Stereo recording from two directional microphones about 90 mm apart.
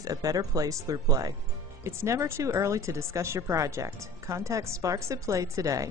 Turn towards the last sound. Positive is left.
turn(degrees=-40)  # may be behind; listen again after turning